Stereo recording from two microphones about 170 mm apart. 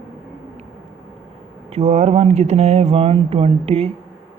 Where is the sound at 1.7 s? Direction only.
40° right (ahead or behind).